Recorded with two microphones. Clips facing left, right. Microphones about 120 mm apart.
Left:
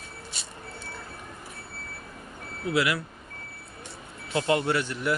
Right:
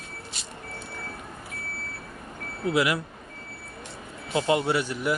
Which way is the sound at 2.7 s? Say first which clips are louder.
Right 2 dB; 15° right (ahead or behind).